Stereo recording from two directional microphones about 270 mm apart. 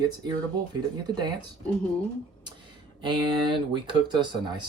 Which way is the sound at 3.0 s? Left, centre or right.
Centre.